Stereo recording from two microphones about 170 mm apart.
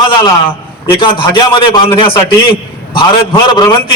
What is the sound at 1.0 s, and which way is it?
A man's voice, 30° left (ahead or behind).